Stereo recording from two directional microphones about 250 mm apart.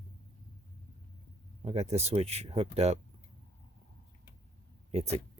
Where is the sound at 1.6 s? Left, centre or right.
Right.